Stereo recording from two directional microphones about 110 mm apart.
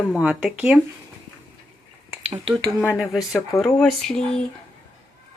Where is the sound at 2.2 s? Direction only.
70° right (ahead or behind).